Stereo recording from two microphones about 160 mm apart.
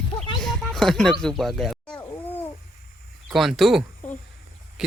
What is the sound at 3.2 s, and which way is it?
Speech, centre (ahead or behind).